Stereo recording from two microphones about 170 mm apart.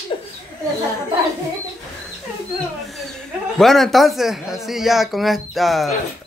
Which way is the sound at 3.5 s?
Centre (ahead or behind).